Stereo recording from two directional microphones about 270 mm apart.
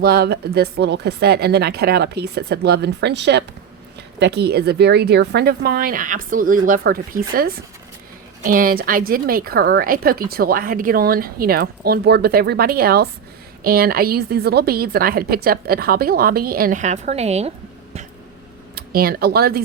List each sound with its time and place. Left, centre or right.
0.0 s a woman's voice: right
18.7 s speech: right